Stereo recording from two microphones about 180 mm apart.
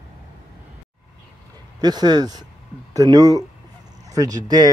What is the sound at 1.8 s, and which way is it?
Speech, 25° right (ahead or behind).